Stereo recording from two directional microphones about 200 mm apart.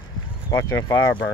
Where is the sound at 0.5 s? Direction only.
15° left (ahead or behind).